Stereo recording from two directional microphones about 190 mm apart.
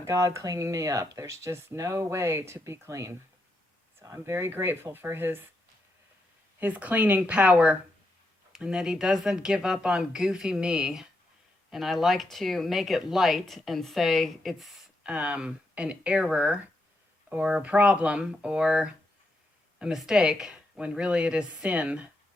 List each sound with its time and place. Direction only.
0.0 s speech: 15° right (ahead or behind)
6.6 s speech: 10° right (ahead or behind)